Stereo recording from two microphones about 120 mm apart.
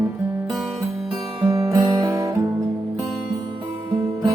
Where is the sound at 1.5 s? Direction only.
25° right (ahead or behind).